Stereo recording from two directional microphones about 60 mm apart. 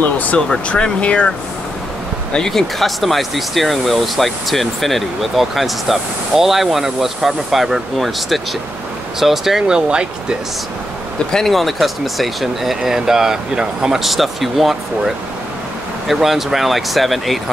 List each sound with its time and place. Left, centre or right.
0.0 s speech: left
0.4 s speech: centre
2.3 s speech: centre
11.3 s speech: centre